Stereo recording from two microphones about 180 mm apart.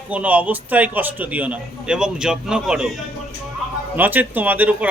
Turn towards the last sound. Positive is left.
turn(degrees=-10)  # may be behind; listen again after turning